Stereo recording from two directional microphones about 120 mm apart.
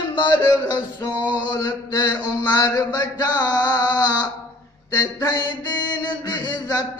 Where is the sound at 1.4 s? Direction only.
35° left (ahead or behind).